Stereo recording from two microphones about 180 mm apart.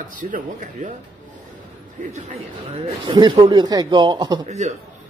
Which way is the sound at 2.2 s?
35° right (ahead or behind).